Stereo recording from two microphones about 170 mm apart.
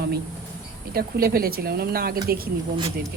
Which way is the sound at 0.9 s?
65° right (ahead or behind).